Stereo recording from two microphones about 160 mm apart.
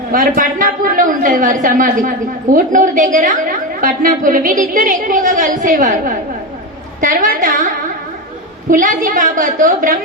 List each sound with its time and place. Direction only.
0.1 s a woman's voice: 60° right (ahead or behind)